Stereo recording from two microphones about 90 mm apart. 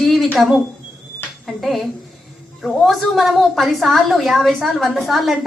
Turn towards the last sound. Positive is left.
turn(degrees=0)  # may be behind; listen again after turning